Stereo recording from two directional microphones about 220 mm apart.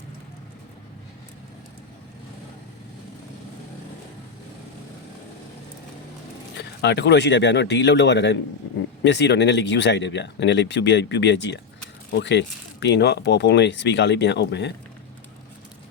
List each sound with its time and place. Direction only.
6.6 s speech: 50° left (ahead or behind)